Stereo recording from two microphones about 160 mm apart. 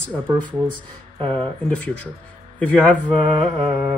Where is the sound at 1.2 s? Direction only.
35° right (ahead or behind).